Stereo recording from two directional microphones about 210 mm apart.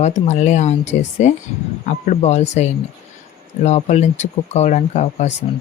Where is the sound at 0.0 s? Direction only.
35° left (ahead or behind).